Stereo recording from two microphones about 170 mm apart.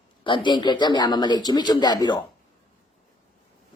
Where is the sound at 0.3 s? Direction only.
30° left (ahead or behind).